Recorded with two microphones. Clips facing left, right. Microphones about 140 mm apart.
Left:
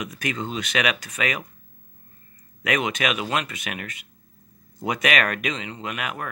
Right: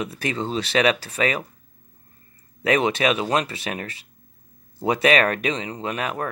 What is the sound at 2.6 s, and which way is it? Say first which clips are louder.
Speech: right 5 dB; 30° right (ahead or behind).